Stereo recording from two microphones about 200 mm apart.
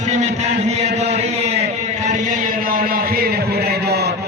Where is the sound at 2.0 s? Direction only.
40° right (ahead or behind).